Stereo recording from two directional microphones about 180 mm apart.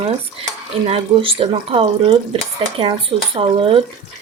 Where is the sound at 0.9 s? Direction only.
30° right (ahead or behind).